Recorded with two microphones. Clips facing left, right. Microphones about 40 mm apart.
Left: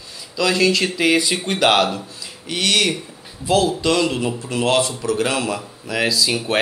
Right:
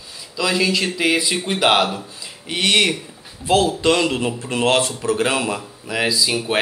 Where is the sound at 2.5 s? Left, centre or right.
Right.